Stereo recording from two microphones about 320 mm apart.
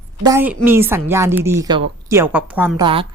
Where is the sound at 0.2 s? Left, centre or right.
Centre.